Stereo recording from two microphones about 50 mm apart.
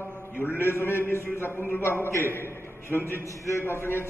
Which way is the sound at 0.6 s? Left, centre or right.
Left.